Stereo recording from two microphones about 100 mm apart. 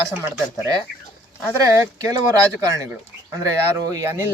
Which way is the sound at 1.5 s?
35° right (ahead or behind).